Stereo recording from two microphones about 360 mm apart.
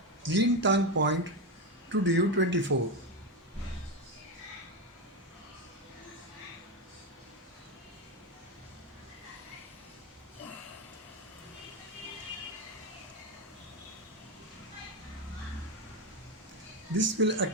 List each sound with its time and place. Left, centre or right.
0.3 s speech: right
16.9 s speech: right